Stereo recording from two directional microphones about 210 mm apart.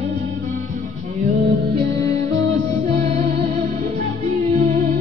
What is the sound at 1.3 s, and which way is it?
Music, 45° right (ahead or behind).